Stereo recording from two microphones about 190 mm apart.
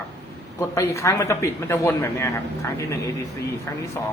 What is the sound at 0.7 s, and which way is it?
Speech, 15° left (ahead or behind).